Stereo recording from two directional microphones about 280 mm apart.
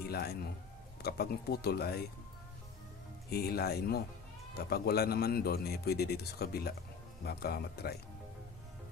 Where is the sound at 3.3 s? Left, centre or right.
Left.